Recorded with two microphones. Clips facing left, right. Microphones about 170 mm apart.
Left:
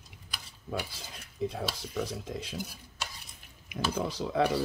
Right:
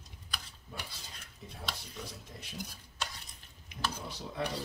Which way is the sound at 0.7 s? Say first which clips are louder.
Left 11 dB; 90° left.